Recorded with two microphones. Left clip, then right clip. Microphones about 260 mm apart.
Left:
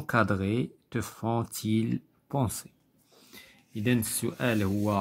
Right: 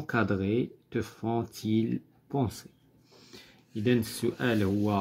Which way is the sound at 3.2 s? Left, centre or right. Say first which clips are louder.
Left 1 dB; centre.